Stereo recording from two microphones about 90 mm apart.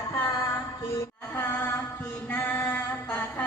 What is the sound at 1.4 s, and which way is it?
Chant, 20° left (ahead or behind).